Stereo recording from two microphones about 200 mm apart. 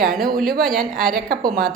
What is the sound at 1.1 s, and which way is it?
Speech, 45° right (ahead or behind).